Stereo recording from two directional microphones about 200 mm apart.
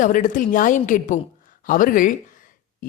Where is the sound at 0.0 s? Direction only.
40° left (ahead or behind).